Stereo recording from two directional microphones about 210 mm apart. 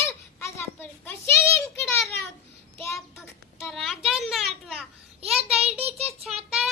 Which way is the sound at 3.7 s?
Centre (ahead or behind).